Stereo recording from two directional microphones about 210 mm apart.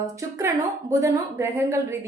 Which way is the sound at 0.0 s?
15° right (ahead or behind).